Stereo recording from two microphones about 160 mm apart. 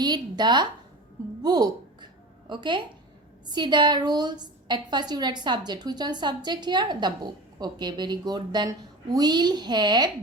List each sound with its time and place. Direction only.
0.0 s a woman's voice: 25° right (ahead or behind)
1.4 s a sound: 25° right (ahead or behind)
2.5 s a woman's voice: 30° right (ahead or behind)